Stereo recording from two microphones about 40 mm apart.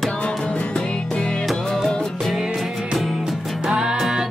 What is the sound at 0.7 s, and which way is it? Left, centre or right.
Music, left.